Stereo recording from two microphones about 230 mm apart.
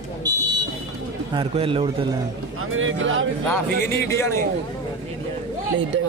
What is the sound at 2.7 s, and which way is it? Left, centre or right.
Speech, right.